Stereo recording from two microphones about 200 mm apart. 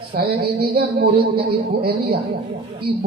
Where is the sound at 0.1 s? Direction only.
50° right (ahead or behind).